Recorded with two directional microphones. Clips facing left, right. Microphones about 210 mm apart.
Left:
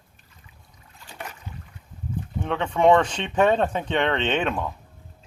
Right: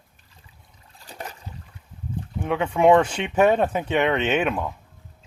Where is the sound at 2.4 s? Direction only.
10° right (ahead or behind).